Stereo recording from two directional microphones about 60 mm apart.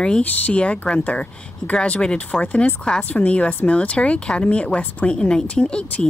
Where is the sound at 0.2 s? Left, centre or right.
Left.